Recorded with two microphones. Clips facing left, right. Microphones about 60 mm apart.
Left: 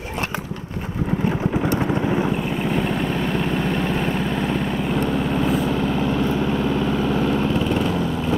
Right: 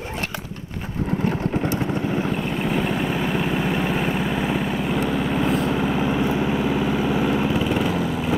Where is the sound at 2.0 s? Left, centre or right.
Centre.